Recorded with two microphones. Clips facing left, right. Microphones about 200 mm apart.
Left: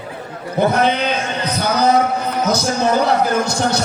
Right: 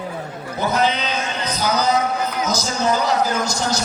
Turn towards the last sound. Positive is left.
turn(degrees=60)  # may be behind; listen again after turning